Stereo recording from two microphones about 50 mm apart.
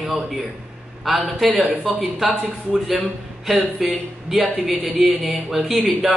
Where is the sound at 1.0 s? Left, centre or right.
Centre.